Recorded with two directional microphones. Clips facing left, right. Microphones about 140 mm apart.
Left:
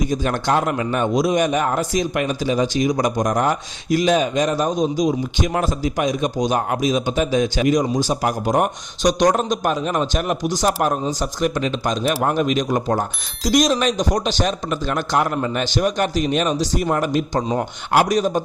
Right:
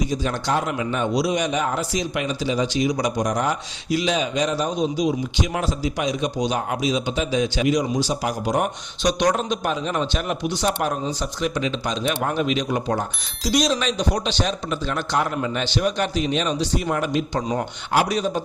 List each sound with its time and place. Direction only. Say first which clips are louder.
0.1 s a man's voice: left 4 dB; 55° left (ahead or behind)